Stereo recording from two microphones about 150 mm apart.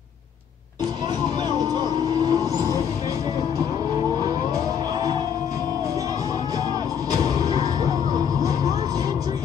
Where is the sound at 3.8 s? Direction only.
25° right (ahead or behind).